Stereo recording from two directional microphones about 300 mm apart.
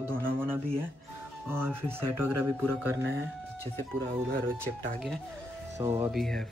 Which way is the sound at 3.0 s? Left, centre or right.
Right.